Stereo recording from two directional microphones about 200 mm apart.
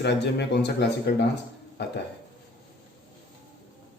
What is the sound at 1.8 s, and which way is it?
Speech, 55° left (ahead or behind).